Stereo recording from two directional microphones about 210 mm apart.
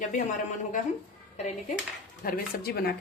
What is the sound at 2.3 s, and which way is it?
Speech, 45° left (ahead or behind).